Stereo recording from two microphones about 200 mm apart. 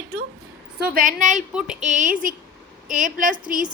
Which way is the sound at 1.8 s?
40° right (ahead or behind).